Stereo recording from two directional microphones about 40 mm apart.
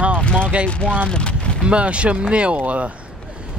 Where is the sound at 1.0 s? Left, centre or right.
Left.